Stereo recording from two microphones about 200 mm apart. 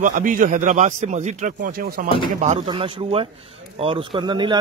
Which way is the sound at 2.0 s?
25° left (ahead or behind).